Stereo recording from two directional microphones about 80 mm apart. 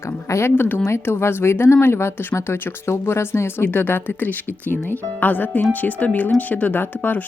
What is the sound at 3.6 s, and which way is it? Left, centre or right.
Speech, left.